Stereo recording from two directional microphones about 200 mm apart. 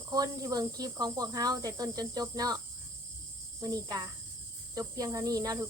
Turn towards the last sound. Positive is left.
turn(degrees=-15)  # may be behind; listen again after turning